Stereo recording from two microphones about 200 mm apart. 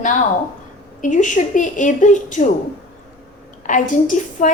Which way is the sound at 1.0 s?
40° left (ahead or behind).